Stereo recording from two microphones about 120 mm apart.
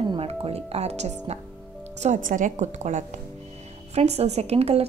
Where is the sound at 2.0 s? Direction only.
85° right.